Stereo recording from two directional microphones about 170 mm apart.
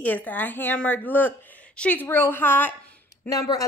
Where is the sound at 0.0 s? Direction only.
10° left (ahead or behind).